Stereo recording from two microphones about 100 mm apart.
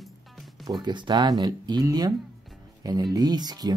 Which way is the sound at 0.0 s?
Centre (ahead or behind).